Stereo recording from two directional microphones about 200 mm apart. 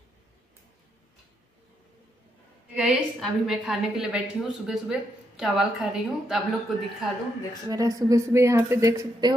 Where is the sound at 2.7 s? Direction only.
Centre (ahead or behind).